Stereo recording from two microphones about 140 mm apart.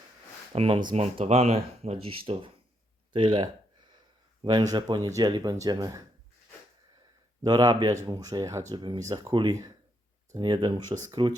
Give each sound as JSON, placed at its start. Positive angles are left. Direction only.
{"t": 0.5, "sound": "speech", "side_deg": -40}
{"t": 0.9, "sound": "speech", "side_deg": -50}
{"t": 7.4, "sound": "speech", "side_deg": -30}